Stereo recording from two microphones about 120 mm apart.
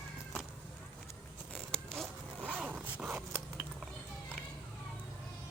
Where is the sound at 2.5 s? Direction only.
15° right (ahead or behind).